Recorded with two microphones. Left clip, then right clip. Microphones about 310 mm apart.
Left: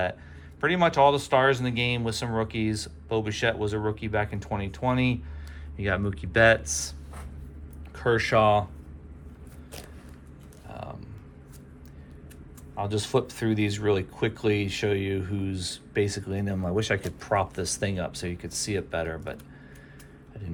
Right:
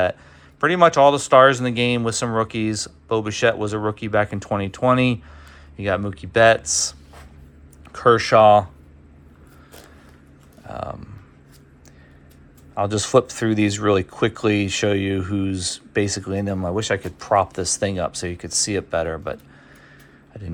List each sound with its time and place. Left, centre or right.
0.6 s speech: centre
7.9 s speech: centre
10.7 s speech: centre
12.7 s speech: centre